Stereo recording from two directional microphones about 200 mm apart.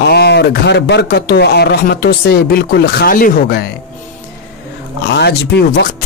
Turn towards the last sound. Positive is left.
turn(degrees=60)  # may be behind; listen again after turning